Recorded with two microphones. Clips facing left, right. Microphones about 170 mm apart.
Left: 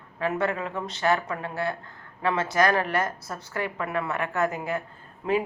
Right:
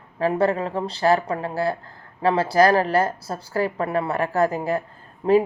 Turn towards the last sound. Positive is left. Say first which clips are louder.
# right 8 dB
turn(degrees=-35)  # may be behind; listen again after turning